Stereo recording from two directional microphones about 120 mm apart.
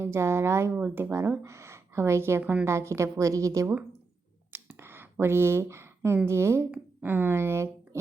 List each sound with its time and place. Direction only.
0.0 s speech: 20° right (ahead or behind)
2.4 s a woman's voice: 10° right (ahead or behind)
2.6 s speech: 25° right (ahead or behind)
4.5 s a sound: 20° right (ahead or behind)
6.2 s speech: 20° right (ahead or behind)